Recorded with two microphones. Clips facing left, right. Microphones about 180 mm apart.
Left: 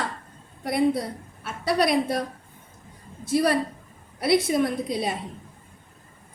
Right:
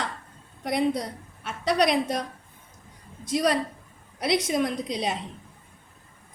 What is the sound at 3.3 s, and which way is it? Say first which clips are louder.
Speech: left 2 dB; 60° left (ahead or behind).